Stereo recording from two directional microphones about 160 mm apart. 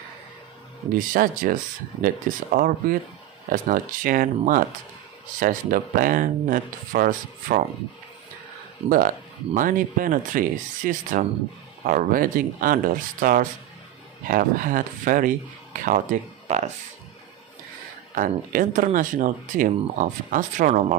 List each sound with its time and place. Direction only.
0.9 s speech: 60° right (ahead or behind)
8.8 s speech: 60° right (ahead or behind)
18.1 s speech: 55° right (ahead or behind)